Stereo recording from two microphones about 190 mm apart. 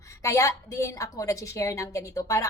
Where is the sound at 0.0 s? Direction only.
15° left (ahead or behind).